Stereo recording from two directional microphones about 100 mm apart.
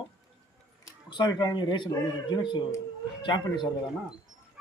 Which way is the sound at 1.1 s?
45° left (ahead or behind).